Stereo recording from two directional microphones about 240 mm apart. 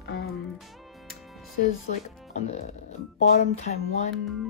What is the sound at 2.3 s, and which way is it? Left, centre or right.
Music, left.